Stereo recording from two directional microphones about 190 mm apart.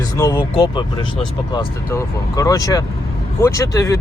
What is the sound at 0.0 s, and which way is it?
Speech, 20° left (ahead or behind).